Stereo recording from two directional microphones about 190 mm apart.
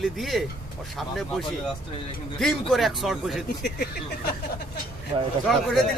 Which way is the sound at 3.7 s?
55° left (ahead or behind).